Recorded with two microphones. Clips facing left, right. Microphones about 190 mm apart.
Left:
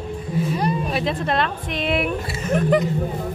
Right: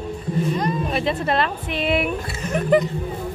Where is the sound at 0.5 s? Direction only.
10° left (ahead or behind).